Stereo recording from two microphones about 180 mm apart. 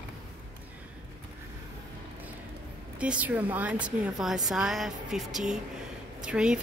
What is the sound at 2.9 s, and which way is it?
A woman's voice, 5° right (ahead or behind).